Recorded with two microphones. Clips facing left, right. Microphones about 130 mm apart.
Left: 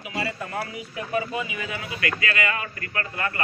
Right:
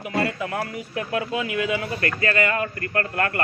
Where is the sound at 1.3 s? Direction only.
85° right.